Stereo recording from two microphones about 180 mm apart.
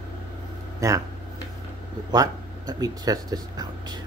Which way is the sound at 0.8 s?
15° right (ahead or behind).